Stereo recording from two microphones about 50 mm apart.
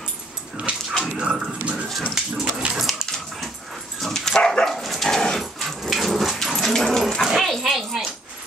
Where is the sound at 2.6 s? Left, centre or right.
Right.